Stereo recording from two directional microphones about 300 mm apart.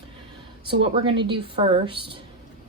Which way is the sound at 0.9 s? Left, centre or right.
Centre.